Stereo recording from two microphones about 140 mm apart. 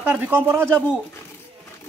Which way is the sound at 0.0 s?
15° right (ahead or behind).